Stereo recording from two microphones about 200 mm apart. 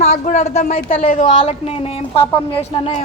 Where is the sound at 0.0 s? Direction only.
35° left (ahead or behind).